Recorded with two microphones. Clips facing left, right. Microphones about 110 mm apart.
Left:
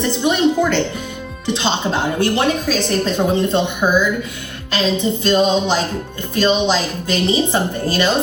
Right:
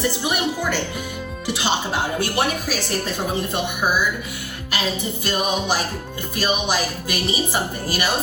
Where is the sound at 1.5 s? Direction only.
20° left (ahead or behind).